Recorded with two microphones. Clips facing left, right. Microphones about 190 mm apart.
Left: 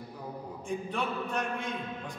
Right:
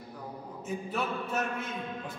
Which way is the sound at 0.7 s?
5° right (ahead or behind).